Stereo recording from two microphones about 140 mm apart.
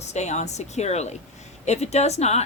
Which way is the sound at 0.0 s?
55° left (ahead or behind).